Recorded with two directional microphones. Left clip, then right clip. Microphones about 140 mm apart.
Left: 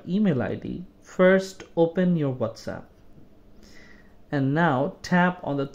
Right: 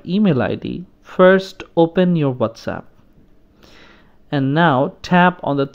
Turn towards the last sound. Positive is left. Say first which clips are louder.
# right 9 dB
turn(degrees=-25)  # may be behind; listen again after turning